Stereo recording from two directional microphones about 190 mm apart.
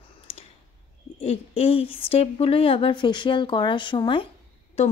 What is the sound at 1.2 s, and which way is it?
Speech, 30° left (ahead or behind).